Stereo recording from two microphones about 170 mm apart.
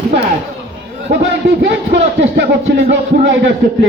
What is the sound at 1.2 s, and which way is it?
Speech, 90° right.